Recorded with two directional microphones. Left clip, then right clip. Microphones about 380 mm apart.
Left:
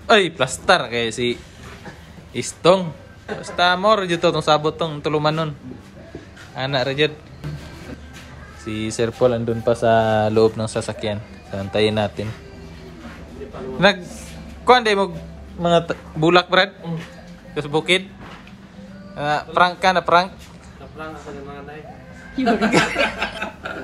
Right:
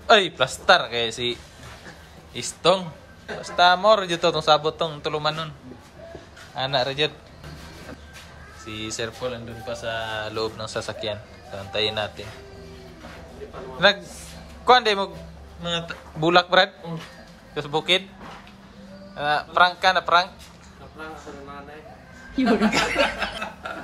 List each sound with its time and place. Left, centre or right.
0.0 s speech: centre
6.5 s speech: centre
8.6 s speech: centre
13.8 s speech: centre
19.1 s speech: centre
22.3 s speech: centre